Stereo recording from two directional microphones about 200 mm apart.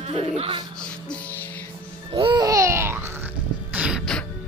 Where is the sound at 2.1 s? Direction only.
25° right (ahead or behind); by 4.2 s centre (ahead or behind).